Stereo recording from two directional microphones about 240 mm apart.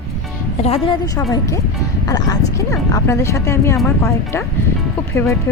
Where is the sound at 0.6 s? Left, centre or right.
Left.